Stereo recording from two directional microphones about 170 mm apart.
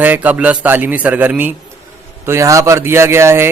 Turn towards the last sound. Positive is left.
turn(degrees=-15)  # may be behind; listen again after turning